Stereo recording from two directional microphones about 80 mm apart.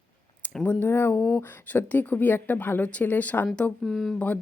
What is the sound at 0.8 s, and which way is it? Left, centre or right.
A woman's voice, left.